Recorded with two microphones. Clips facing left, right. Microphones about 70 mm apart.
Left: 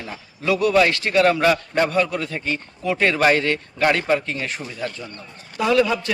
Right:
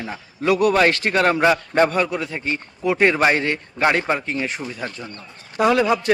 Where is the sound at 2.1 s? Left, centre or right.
Centre.